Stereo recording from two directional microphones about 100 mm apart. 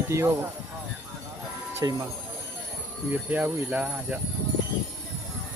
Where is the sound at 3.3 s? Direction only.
15° right (ahead or behind).